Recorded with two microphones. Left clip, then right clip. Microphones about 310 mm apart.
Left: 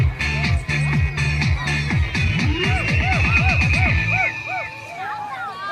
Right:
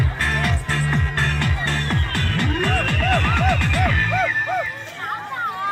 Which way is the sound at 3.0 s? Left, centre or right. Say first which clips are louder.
Even; left.